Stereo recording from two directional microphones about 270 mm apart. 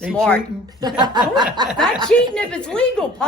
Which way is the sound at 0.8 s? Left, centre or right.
Centre.